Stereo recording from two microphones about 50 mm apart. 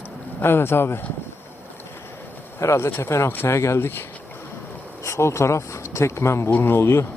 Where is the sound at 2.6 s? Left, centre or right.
Left.